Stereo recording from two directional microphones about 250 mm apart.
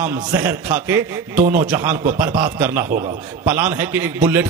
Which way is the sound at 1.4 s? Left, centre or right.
Right.